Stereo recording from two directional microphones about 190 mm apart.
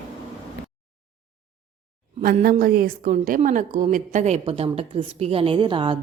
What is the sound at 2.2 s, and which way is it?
A woman's voice, 50° right (ahead or behind).